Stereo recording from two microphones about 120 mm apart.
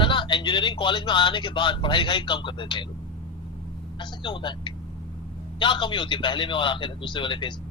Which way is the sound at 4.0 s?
40° left (ahead or behind).